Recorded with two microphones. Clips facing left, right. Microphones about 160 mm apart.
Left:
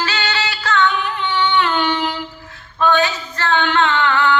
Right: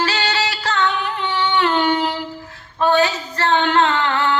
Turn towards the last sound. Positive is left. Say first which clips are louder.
# left 2 dB
turn(degrees=-35)  # may be behind; listen again after turning